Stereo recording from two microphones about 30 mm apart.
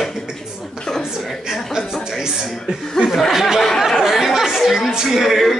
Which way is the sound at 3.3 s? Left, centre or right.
Centre.